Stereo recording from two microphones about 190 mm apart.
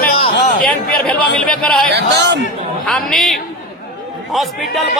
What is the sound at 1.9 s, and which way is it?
Speech, 65° right (ahead or behind).